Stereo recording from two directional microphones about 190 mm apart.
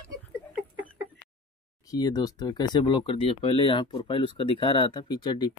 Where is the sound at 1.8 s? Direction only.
20° left (ahead or behind).